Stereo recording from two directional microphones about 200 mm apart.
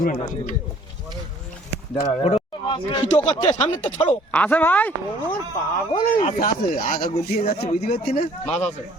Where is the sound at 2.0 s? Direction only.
30° left (ahead or behind); by 4.9 s 10° left (ahead or behind).